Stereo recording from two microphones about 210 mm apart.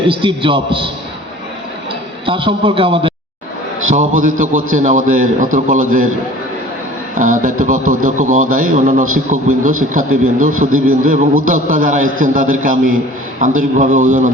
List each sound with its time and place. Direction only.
0.1 s a man's voice: 25° right (ahead or behind)
2.2 s a man's voice: 25° right (ahead or behind)
3.9 s a man's voice: 40° right (ahead or behind)
7.2 s a man's voice: 40° right (ahead or behind)
10.7 s a man's voice: 80° right
11.4 s a man's voice: 40° right (ahead or behind)